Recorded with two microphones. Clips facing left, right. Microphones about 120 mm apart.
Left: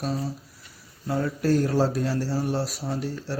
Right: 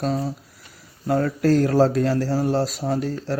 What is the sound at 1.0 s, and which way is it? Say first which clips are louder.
Speech: right 5 dB; 65° right (ahead or behind).